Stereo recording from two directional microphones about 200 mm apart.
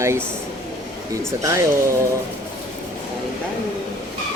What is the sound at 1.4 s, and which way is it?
Speech, 15° right (ahead or behind).